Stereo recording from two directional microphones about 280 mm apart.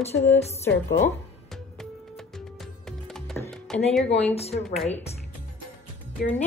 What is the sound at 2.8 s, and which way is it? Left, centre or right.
Music, centre.